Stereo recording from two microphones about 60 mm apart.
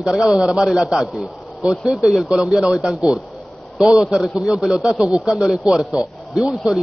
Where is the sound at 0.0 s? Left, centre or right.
Centre.